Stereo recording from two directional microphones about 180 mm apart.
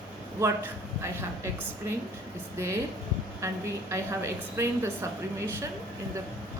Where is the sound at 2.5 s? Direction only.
15° right (ahead or behind).